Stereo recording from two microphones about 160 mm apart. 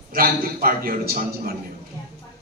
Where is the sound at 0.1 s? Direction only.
65° right (ahead or behind).